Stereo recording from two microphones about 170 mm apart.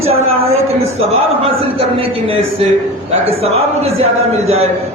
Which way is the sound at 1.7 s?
35° right (ahead or behind).